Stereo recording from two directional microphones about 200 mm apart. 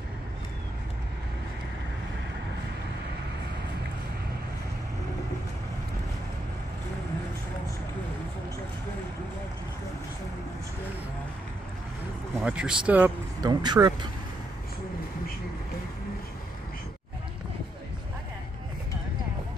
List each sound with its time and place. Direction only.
12.4 s speech: 5° right (ahead or behind)
13.4 s vehicle: 20° right (ahead or behind)